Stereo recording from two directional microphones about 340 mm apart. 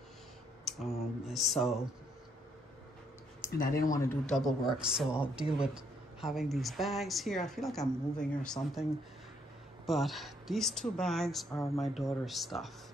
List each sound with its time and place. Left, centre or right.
0.7 s speech: centre
3.4 s speech: left
3.9 s speech: centre
9.8 s speech: centre